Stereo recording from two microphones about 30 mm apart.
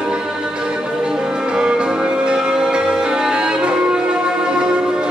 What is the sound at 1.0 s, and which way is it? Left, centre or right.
Music, right.